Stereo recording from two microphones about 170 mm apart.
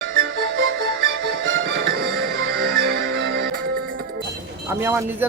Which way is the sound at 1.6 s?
70° right (ahead or behind).